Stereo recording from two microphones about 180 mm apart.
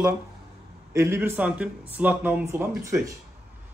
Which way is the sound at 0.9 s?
15° right (ahead or behind).